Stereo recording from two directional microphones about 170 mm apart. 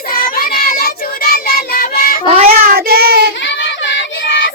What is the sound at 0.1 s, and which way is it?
Child singing, 60° left (ahead or behind).